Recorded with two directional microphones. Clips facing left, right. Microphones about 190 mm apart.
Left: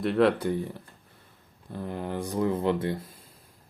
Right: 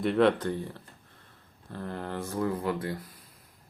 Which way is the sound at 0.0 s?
Centre (ahead or behind).